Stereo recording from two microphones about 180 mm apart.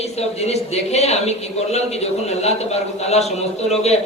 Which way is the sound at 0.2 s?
35° left (ahead or behind).